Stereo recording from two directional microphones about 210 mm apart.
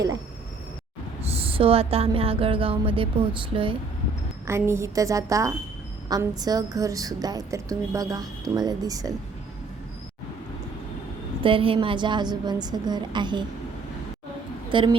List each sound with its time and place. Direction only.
1.3 s speech: 25° right (ahead or behind)
4.4 s a woman's voice: 10° right (ahead or behind)
11.4 s speech: 25° right (ahead or behind)
14.7 s a woman's voice: 25° right (ahead or behind)